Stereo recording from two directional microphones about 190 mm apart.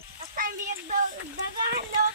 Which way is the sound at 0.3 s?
45° right (ahead or behind).